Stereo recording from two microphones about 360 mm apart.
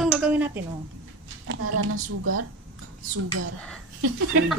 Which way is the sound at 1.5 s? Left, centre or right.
Right.